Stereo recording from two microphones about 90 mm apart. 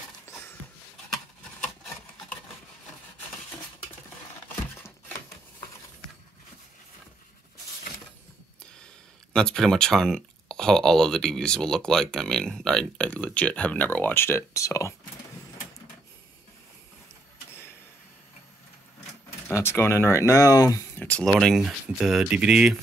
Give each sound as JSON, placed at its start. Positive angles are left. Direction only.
{"t": 9.3, "sound": "speech", "side_deg": 10}
{"t": 19.4, "sound": "speech", "side_deg": 30}
{"t": 20.9, "sound": "a sound", "side_deg": 20}
{"t": 21.3, "sound": "speech", "side_deg": -5}